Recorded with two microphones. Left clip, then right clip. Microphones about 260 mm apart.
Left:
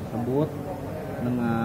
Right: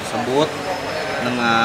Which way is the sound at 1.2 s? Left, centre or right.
Centre.